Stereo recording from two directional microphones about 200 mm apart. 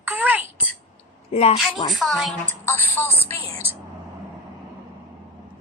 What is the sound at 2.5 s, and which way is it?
Speech, 10° left (ahead or behind).